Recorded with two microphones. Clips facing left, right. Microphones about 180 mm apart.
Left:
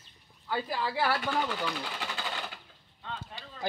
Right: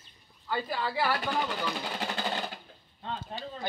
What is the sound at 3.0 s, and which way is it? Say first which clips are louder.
Speech: right 5 dB; 40° right (ahead or behind).